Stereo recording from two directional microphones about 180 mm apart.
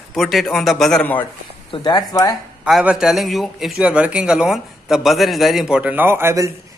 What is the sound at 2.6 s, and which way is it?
A man's voice, 5° right (ahead or behind).